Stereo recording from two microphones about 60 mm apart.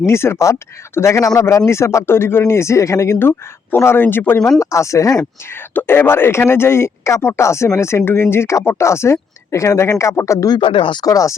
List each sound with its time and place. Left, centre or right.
0.0 s speech: left
3.2 s speech: left
4.6 s speech: left
5.8 s speech: left
11.0 s speech: left